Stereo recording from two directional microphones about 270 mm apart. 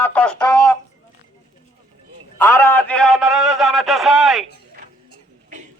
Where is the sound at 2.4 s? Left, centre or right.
Centre.